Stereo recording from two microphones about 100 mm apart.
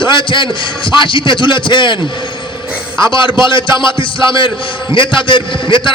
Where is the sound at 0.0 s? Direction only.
55° left (ahead or behind).